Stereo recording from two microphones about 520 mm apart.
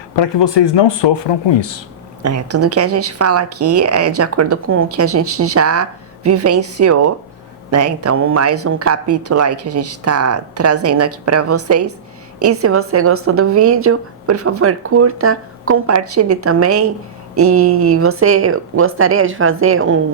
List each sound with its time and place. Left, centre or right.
0.2 s speech: left
2.2 s speech: right